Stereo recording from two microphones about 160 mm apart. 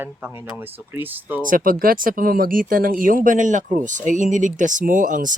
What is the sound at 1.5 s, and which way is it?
Speech, 60° right (ahead or behind).